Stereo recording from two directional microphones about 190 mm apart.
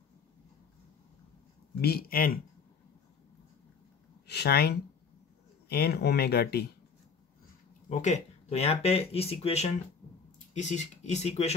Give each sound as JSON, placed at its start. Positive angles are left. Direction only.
{"t": 1.8, "sound": "speech", "side_deg": 55}
{"t": 4.3, "sound": "speech", "side_deg": 55}
{"t": 8.0, "sound": "speech", "side_deg": 35}